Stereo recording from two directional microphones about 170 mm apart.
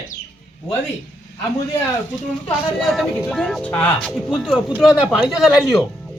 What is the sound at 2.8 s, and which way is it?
Speech, centre (ahead or behind).